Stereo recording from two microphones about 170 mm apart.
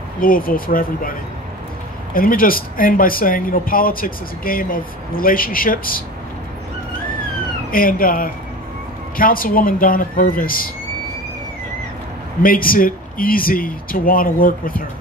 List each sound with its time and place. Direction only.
0.2 s speech: 55° left (ahead or behind)
2.1 s speech: 55° left (ahead or behind)
7.7 s speech: 55° left (ahead or behind)
12.4 s speech: 55° left (ahead or behind)